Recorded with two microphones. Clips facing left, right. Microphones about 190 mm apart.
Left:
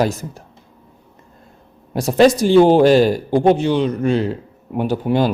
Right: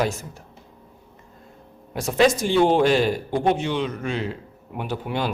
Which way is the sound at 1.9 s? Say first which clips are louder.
Left 6 dB; 35° left (ahead or behind).